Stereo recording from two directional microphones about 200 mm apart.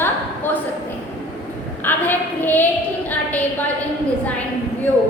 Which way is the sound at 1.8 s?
10° left (ahead or behind).